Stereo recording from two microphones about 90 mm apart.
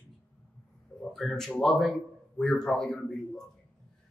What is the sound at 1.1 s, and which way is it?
Speech, 5° left (ahead or behind).